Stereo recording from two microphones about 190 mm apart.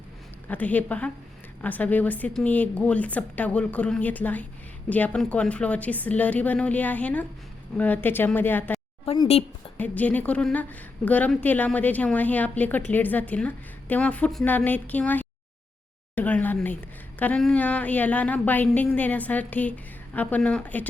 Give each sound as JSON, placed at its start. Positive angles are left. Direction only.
{"t": 0.4, "sound": "a woman's voice", "side_deg": 10}
{"t": 9.0, "sound": "speech", "side_deg": 30}
{"t": 9.7, "sound": "a woman's voice", "side_deg": 10}